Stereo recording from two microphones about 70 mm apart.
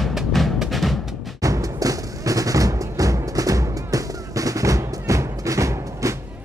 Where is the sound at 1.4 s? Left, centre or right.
Right.